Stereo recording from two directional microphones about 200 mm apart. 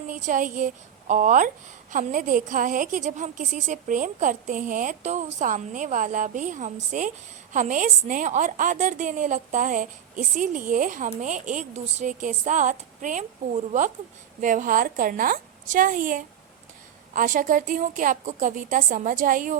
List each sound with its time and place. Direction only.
0.1 s a woman's voice: 40° right (ahead or behind)